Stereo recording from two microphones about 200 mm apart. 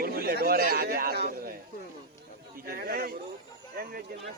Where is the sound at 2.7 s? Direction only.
50° right (ahead or behind).